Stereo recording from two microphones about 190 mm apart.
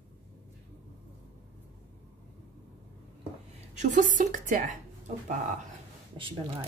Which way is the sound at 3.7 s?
40° right (ahead or behind).